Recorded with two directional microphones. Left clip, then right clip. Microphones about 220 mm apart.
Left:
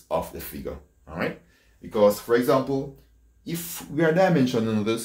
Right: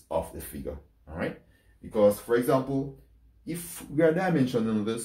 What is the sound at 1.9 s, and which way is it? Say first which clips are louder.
Speech: left 3 dB; 15° left (ahead or behind).